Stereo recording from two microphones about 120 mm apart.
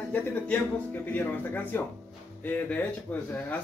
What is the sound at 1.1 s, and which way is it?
A man's voice, 15° left (ahead or behind).